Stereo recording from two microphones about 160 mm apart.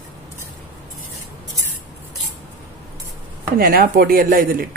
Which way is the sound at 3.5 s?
65° right (ahead or behind).